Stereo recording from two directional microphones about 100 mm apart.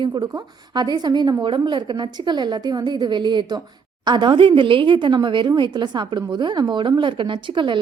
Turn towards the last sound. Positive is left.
turn(degrees=-55)  # may be behind; listen again after turning